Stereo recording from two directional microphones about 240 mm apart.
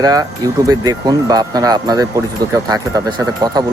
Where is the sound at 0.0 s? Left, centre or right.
Centre.